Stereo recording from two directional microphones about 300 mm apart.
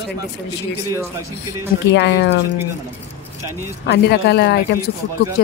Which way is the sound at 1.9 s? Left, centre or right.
Left.